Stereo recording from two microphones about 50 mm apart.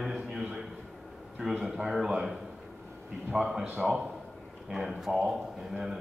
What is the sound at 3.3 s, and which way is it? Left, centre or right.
Speech, centre.